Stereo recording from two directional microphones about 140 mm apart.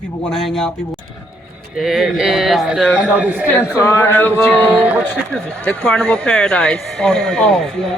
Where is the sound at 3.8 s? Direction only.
20° left (ahead or behind).